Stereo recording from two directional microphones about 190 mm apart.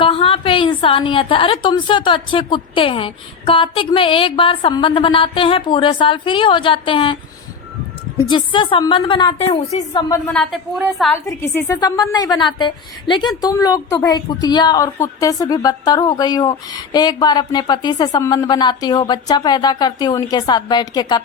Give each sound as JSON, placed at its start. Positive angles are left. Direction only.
{"t": 0.0, "sound": "a woman's voice", "side_deg": 30}
{"t": 8.2, "sound": "a woman's voice", "side_deg": 25}
{"t": 10.2, "sound": "a woman's voice", "side_deg": 0}
{"t": 11.1, "sound": "a woman's voice", "side_deg": 10}